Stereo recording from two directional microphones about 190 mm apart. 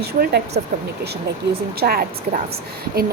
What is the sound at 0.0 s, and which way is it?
Speech, 55° right (ahead or behind).